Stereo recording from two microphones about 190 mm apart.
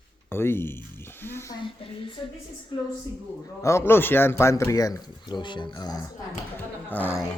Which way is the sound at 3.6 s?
15° left (ahead or behind).